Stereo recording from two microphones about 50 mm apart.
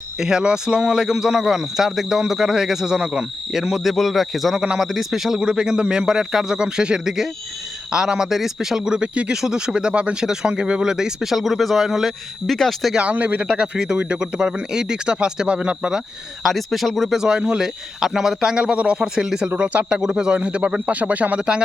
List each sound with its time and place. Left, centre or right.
0.2 s speech: centre
9.3 s speech: centre
13.0 s speech: right
13.4 s speech: centre
16.4 s speech: centre
17.2 s speech: centre
18.0 s speech: centre
18.5 s speech: right
19.0 s speech: centre
19.5 s speech: right